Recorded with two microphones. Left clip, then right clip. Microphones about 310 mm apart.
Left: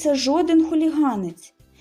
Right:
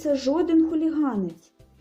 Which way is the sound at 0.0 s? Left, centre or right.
Centre.